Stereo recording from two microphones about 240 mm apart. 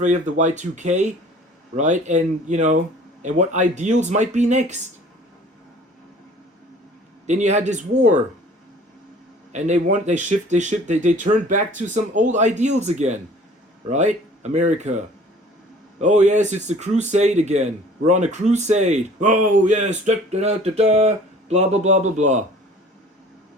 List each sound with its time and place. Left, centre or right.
0.0 s speech: right
7.3 s speech: right
9.5 s speech: right